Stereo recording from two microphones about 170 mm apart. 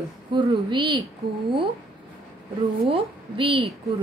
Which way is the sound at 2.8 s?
35° right (ahead or behind).